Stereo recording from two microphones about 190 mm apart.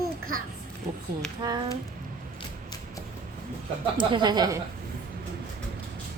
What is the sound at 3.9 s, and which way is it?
Speech, 25° right (ahead or behind).